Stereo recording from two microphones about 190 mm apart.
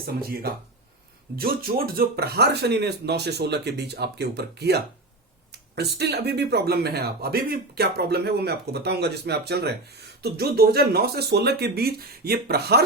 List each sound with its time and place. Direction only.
0.0 s speech: 50° right (ahead or behind)